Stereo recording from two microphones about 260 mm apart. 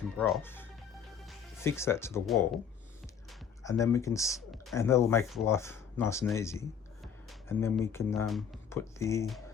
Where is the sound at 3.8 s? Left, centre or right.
Centre.